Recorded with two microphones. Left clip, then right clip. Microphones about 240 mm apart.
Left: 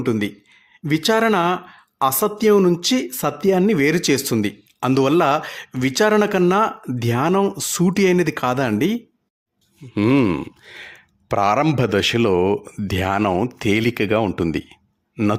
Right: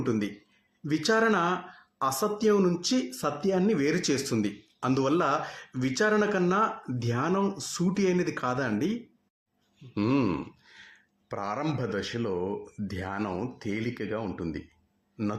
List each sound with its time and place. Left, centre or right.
0.0 s speech: left
9.9 s a man's voice: left